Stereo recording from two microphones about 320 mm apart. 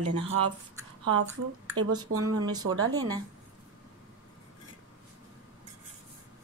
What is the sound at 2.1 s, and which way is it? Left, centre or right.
Speech, right.